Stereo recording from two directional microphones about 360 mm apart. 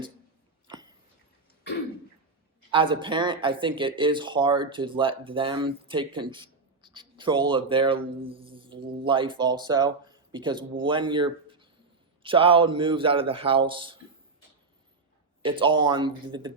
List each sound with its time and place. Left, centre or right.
2.6 s speech: centre
15.4 s speech: centre